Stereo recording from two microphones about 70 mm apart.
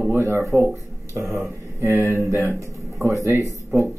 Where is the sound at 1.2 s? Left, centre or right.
Centre.